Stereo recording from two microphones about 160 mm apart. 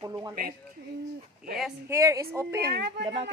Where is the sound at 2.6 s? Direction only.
85° right.